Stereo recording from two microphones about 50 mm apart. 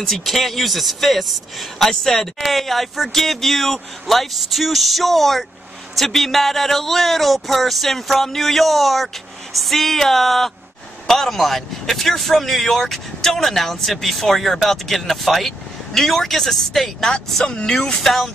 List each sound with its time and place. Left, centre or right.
0.0 s speech: centre